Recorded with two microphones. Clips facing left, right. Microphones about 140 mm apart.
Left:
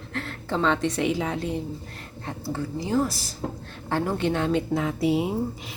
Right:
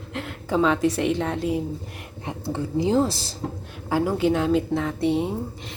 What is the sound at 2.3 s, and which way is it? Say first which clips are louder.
A woman's voice: right 2 dB; 20° right (ahead or behind).